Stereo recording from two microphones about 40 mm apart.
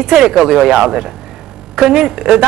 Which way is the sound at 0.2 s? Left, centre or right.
Centre.